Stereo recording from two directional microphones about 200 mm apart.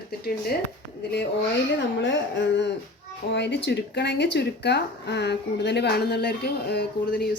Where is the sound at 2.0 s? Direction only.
65° left (ahead or behind).